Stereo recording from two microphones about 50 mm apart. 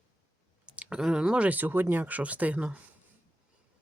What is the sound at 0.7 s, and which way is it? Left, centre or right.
Clicking, right.